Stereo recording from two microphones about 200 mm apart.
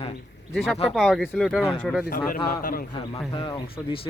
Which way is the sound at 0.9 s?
Centre (ahead or behind).